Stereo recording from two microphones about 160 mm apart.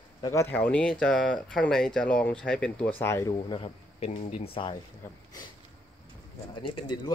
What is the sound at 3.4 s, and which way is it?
Speech, 35° left (ahead or behind).